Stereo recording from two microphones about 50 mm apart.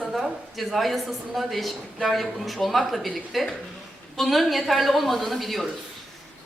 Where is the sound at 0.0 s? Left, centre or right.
Centre.